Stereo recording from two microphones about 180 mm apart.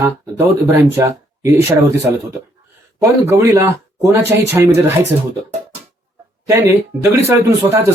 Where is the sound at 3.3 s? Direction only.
15° right (ahead or behind).